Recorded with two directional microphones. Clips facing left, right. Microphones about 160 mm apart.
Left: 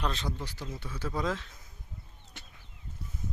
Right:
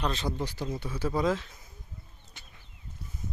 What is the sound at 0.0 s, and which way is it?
Speech, centre (ahead or behind).